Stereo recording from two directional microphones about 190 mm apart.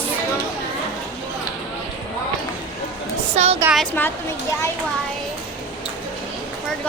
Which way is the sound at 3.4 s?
35° right (ahead or behind).